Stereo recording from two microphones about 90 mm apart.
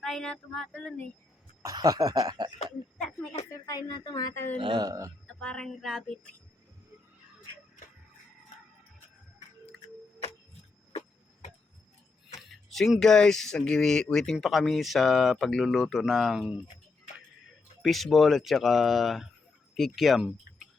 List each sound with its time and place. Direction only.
0.0 s child singing: 5° left (ahead or behind)
1.6 s speech: 40° right (ahead or behind)
3.5 s speech: 45° left (ahead or behind)
4.5 s speech: 65° right (ahead or behind)
4.9 s speech: 35° right (ahead or behind)
5.2 s a sound: 10° left (ahead or behind)
12.7 s speech: 5° left (ahead or behind)
17.8 s speech: centre (ahead or behind)